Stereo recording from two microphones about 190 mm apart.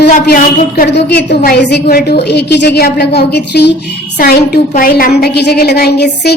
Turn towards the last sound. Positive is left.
turn(degrees=60)  # may be behind; listen again after turning